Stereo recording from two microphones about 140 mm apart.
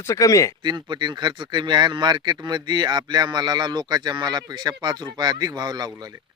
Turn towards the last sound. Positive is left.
turn(degrees=-30)  # may be behind; listen again after turning